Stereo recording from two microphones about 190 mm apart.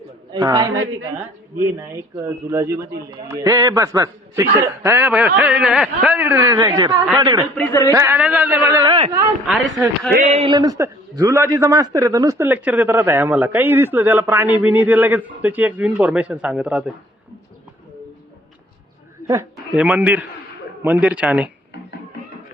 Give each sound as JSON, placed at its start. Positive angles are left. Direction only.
{"t": 0.3, "sound": "a man's voice", "side_deg": -20}
{"t": 1.9, "sound": "a man's voice", "side_deg": -15}
{"t": 7.5, "sound": "speech", "side_deg": 10}
{"t": 7.9, "sound": "a man's voice", "side_deg": -10}
{"t": 8.8, "sound": "a man's voice", "side_deg": -25}
{"t": 9.5, "sound": "speech", "side_deg": 0}
{"t": 10.2, "sound": "speech", "side_deg": -35}
{"t": 10.5, "sound": "a man's voice", "side_deg": -20}
{"t": 19.3, "sound": "a man's voice", "side_deg": -15}